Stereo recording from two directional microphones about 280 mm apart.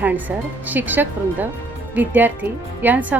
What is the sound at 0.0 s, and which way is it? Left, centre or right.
Speech, centre.